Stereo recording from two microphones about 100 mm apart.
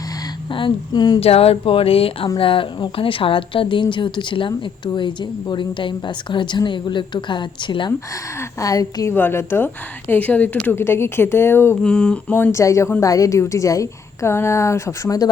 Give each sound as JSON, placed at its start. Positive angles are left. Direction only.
{"t": 0.5, "sound": "a woman's voice", "side_deg": 50}
{"t": 1.2, "sound": "a woman's voice", "side_deg": 85}
{"t": 8.6, "sound": "a woman's voice", "side_deg": 35}
{"t": 9.1, "sound": "speech", "side_deg": 20}
{"t": 11.8, "sound": "a sound", "side_deg": 10}
{"t": 12.3, "sound": "a woman's voice", "side_deg": 25}